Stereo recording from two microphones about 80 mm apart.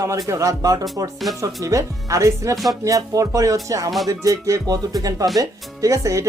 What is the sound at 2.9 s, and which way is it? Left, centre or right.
Speech, right.